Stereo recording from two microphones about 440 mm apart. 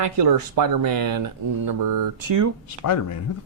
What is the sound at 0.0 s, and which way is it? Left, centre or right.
Speech, right.